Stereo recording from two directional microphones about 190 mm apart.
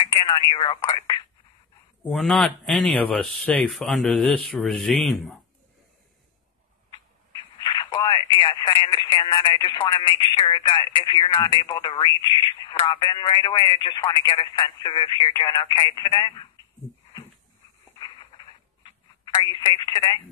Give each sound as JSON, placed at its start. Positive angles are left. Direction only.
{"t": 0.0, "sound": "telephone", "side_deg": 25}
{"t": 0.5, "sound": "speech", "side_deg": 25}
{"t": 2.0, "sound": "speech", "side_deg": 0}
{"t": 7.6, "sound": "speech", "side_deg": 25}
{"t": 18.8, "sound": "telephone", "side_deg": 25}